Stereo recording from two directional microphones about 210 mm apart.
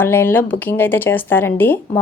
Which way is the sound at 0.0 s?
10° left (ahead or behind).